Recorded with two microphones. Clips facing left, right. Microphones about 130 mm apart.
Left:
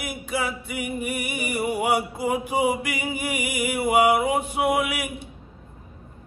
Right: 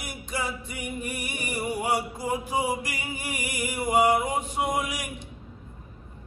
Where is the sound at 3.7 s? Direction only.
65° left (ahead or behind).